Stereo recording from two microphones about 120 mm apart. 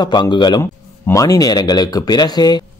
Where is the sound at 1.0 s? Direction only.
30° left (ahead or behind).